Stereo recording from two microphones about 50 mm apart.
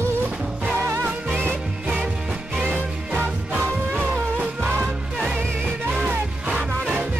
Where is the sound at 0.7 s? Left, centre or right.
Right.